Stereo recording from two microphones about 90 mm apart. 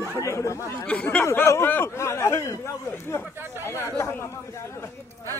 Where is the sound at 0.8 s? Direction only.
15° left (ahead or behind).